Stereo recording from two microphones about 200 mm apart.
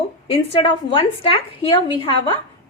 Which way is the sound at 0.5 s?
25° left (ahead or behind).